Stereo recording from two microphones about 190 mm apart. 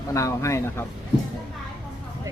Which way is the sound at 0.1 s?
15° left (ahead or behind).